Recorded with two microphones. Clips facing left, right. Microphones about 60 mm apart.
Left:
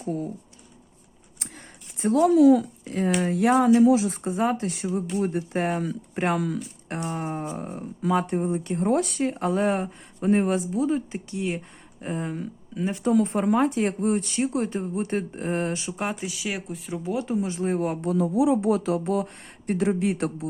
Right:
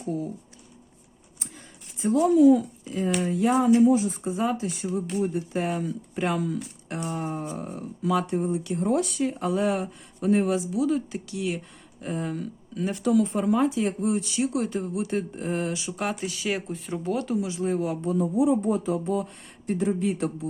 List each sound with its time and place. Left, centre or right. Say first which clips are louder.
0.0 s speech: left 1 dB; left
2.0 s speech: left 1 dB; left
3.2 s speech: left 2 dB; left
4.2 s speech: left 2 dB; left
6.8 s speech: left 1 dB; left
12.3 s speech: even; centre
13.2 s speech: left 1 dB; left
16.0 s speech: right 3 dB; left
16.3 s speech: right 2 dB; centre
17.2 s speech: left 1 dB; left
17.5 s speech: left 1 dB; left